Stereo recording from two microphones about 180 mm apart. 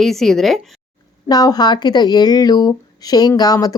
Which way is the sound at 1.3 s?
20° left (ahead or behind).